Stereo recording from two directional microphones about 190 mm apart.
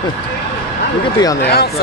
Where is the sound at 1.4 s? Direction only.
60° left (ahead or behind).